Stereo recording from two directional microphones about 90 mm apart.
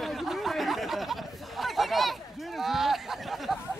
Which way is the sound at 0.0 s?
Centre (ahead or behind).